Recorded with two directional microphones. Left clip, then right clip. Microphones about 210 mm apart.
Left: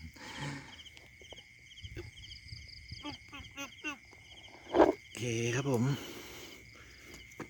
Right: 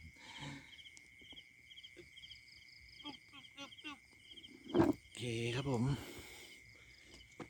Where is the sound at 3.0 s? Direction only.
30° left (ahead or behind).